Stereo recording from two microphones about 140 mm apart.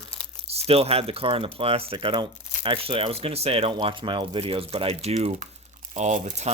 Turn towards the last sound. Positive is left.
turn(degrees=-55)  # may be behind; listen again after turning